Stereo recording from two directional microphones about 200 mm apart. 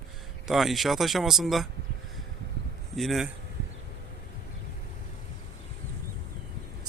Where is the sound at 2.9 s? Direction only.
Centre (ahead or behind).